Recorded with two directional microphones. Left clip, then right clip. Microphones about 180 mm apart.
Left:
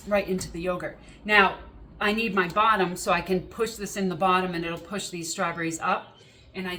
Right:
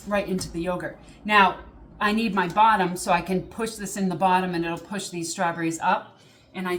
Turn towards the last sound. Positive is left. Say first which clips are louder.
# right 5 dB
turn(degrees=-10)  # may be behind; listen again after turning